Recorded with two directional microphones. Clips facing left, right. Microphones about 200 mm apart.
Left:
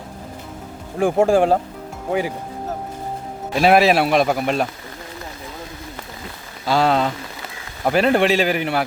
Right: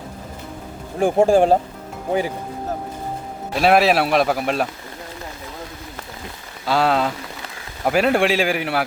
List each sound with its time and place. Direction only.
0.9 s speech: 35° right (ahead or behind)
3.5 s speech: centre (ahead or behind)
6.7 s a man's voice: centre (ahead or behind)